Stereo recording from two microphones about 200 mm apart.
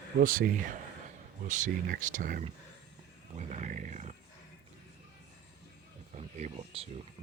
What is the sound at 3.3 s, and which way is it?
Roaring cats, 35° right (ahead or behind).